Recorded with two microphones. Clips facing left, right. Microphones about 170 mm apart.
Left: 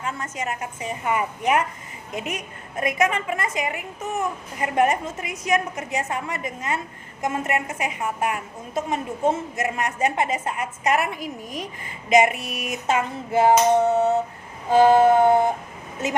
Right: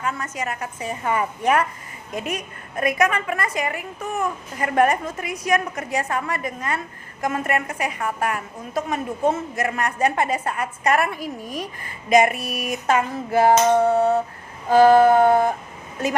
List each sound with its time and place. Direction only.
0.0 s a woman's voice: 25° left (ahead or behind)